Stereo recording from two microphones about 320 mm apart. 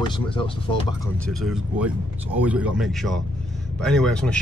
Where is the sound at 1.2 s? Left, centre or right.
Centre.